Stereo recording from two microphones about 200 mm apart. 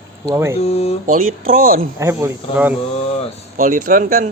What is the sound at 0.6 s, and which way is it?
Speech, 30° left (ahead or behind).